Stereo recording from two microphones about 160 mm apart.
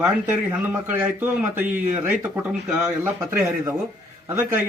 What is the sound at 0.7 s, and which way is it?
A man's voice, 10° right (ahead or behind).